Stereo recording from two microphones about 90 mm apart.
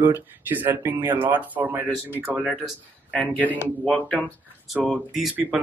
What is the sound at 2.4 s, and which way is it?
Speech, 5° right (ahead or behind).